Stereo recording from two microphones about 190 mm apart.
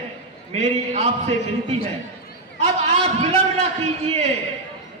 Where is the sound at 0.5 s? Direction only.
35° right (ahead or behind).